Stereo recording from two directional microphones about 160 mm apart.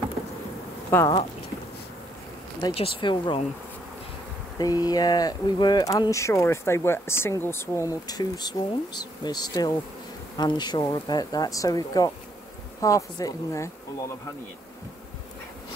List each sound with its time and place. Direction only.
0.8 s speech: 15° left (ahead or behind)
2.7 s speech: 35° left (ahead or behind)
4.6 s speech: 25° left (ahead or behind)